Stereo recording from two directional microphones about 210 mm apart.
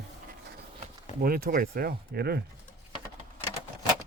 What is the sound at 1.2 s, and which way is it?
Speech, 45° right (ahead or behind).